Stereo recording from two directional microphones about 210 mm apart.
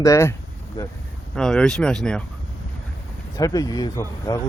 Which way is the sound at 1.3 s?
5° left (ahead or behind).